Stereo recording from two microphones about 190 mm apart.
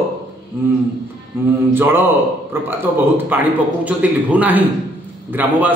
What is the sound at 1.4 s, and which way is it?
A man's voice, 10° right (ahead or behind).